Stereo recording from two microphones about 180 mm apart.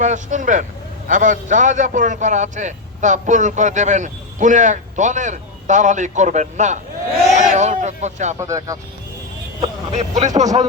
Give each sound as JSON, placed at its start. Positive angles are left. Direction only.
{"t": 0.0, "sound": "a man's voice", "side_deg": -45}
{"t": 8.4, "sound": "speech", "side_deg": -20}
{"t": 9.6, "sound": "speech", "side_deg": -40}